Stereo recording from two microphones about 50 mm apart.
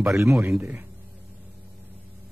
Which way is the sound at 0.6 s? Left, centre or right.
Right.